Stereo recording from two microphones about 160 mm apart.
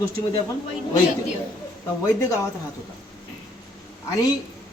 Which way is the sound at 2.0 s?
15° left (ahead or behind).